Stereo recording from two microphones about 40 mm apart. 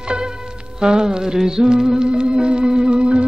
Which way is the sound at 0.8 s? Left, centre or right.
Centre.